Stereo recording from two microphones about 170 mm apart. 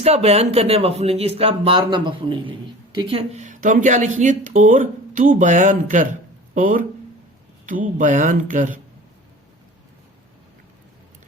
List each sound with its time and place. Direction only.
0.0 s speech: 35° right (ahead or behind)